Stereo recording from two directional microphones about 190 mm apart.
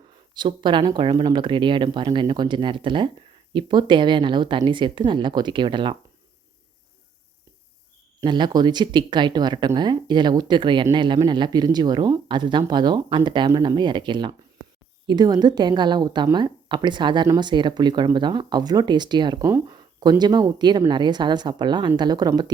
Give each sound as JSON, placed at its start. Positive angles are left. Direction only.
{"t": 0.3, "sound": "a woman's voice", "side_deg": -25}
{"t": 8.2, "sound": "a woman's voice", "side_deg": -25}